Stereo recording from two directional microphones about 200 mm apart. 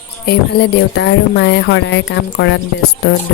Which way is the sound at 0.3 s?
55° left (ahead or behind).